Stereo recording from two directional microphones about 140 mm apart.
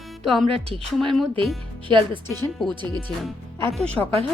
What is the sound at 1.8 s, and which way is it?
Speech, 35° right (ahead or behind).